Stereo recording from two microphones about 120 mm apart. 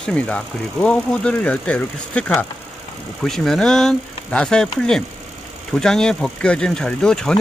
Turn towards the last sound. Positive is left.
turn(degrees=5)  # may be behind; listen again after turning